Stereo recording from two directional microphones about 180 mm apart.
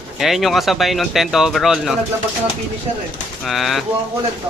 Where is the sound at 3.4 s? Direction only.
Centre (ahead or behind).